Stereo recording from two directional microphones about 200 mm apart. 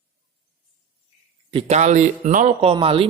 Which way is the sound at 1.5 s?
35° right (ahead or behind).